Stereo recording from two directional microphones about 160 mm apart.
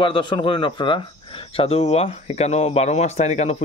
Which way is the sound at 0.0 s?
30° left (ahead or behind).